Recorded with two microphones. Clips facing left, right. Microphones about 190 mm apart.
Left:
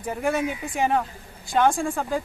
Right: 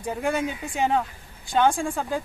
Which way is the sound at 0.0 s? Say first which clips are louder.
Left 1 dB; 5° left (ahead or behind).